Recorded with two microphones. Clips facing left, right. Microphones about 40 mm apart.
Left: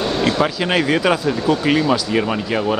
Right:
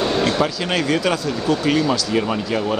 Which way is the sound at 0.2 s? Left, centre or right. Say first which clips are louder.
Left 3 dB; centre.